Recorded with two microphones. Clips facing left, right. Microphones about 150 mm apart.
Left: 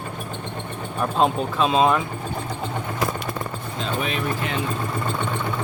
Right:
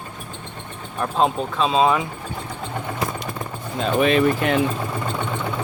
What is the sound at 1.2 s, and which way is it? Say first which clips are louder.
Speech: even; 5° left (ahead or behind).